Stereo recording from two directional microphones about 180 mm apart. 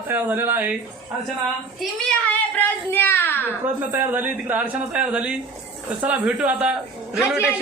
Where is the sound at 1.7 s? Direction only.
5° left (ahead or behind).